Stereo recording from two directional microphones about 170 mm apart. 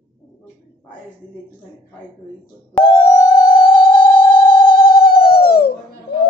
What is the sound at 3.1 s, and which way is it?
Music, 50° left (ahead or behind).